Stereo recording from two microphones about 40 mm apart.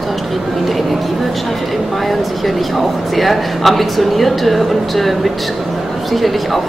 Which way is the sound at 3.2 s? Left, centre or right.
Centre.